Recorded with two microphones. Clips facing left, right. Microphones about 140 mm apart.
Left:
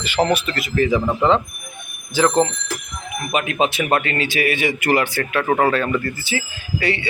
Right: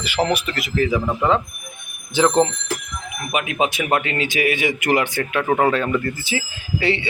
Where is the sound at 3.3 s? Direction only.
10° right (ahead or behind).